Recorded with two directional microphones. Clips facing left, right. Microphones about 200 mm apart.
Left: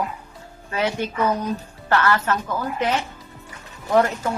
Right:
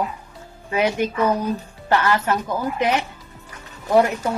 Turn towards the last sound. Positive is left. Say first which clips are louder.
# right 2 dB
turn(degrees=-10)  # may be behind; listen again after turning